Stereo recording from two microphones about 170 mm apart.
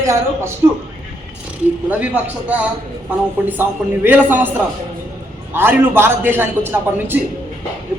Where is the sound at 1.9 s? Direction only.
10° right (ahead or behind).